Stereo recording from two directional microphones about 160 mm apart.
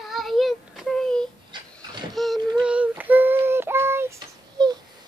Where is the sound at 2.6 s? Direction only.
10° right (ahead or behind).